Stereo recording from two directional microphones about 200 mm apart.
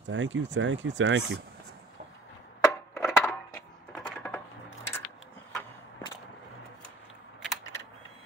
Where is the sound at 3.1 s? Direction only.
Centre (ahead or behind).